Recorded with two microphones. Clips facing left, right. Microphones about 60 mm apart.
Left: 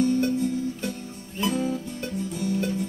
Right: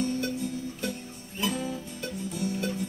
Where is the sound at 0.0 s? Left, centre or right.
Left.